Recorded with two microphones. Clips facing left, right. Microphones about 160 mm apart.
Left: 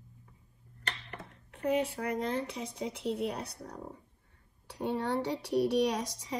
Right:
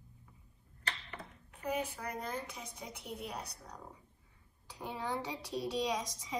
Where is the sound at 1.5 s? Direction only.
65° left (ahead or behind).